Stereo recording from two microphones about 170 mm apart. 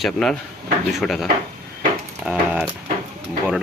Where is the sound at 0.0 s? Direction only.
5° left (ahead or behind).